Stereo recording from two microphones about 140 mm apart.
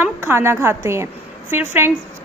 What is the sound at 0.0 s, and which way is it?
A woman's voice, 15° right (ahead or behind).